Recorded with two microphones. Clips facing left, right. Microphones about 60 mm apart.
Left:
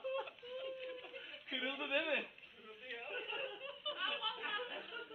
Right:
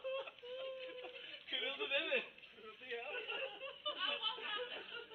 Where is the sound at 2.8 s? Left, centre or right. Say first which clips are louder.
Right 1 dB; centre.